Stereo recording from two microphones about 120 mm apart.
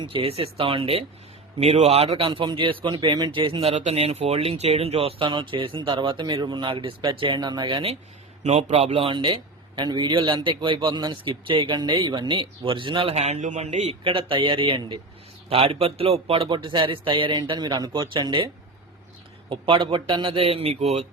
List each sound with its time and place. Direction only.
0.0 s a man's voice: 45° right (ahead or behind)
1.5 s a man's voice: 65° right (ahead or behind)
5.2 s a man's voice: 40° right (ahead or behind)
8.4 s a man's voice: 65° right (ahead or behind); by 13.1 s 45° right (ahead or behind)
13.1 s a man's voice: 70° right (ahead or behind)
14.0 s a man's voice: 45° right (ahead or behind)